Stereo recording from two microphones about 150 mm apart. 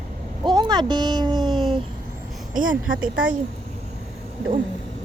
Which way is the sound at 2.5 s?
65° right (ahead or behind).